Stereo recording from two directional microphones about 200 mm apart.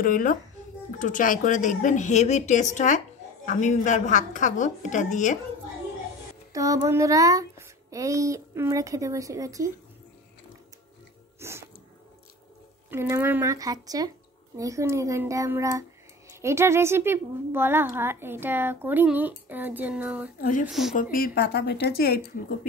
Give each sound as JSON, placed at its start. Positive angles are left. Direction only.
{"t": 0.0, "sound": "a woman's voice", "side_deg": 45}
{"t": 6.5, "sound": "speech", "side_deg": -15}
{"t": 11.3, "sound": "music", "side_deg": -15}
{"t": 12.9, "sound": "speech", "side_deg": -15}
{"t": 20.9, "sound": "speech", "side_deg": 45}